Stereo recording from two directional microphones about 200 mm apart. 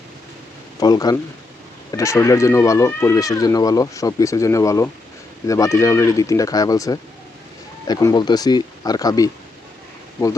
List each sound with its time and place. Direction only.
0.8 s speech: 20° left (ahead or behind)